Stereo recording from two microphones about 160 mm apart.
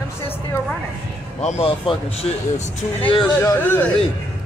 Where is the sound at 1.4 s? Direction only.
40° left (ahead or behind).